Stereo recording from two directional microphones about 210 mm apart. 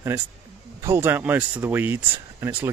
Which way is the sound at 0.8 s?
10° right (ahead or behind).